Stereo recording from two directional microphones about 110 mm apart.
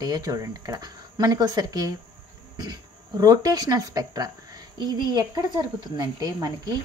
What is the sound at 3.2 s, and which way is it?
Speech, 35° right (ahead or behind).